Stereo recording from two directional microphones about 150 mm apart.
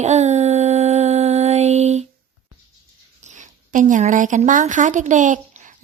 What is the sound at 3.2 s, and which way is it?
A woman's voice, 55° right (ahead or behind).